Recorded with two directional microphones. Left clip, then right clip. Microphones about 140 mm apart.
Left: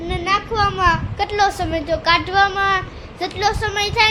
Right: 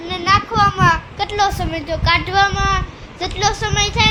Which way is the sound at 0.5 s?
5° left (ahead or behind).